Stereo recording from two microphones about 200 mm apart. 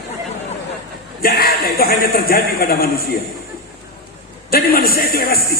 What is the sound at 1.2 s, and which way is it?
Speech, 50° left (ahead or behind).